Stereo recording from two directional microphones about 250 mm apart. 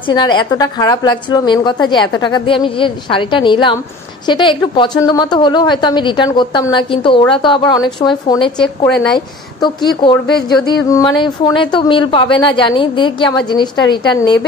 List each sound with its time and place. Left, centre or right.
0.1 s a woman's voice: centre
8.5 s a woman's voice: centre
9.1 s a woman's voice: centre